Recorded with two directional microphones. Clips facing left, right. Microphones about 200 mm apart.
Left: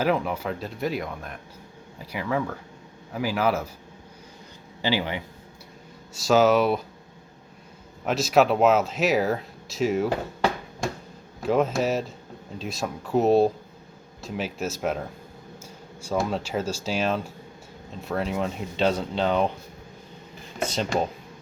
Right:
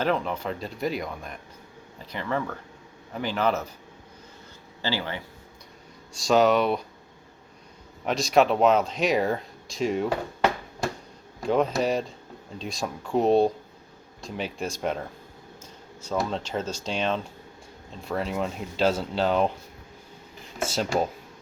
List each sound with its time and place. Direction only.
0.0 s speech: 10° left (ahead or behind)
4.8 s speech: 15° left (ahead or behind)
6.1 s speech: 5° left (ahead or behind)
8.0 s speech: 5° left (ahead or behind)
11.4 s speech: 5° left (ahead or behind)
15.6 s a sound: 10° left (ahead or behind)
16.1 s speech: 10° left (ahead or behind)
20.6 s speech: 5° right (ahead or behind)